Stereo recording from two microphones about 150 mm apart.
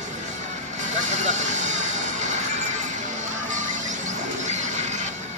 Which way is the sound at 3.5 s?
55° right (ahead or behind).